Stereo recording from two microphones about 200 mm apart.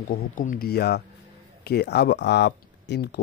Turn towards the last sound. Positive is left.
turn(degrees=55)  # may be behind; listen again after turning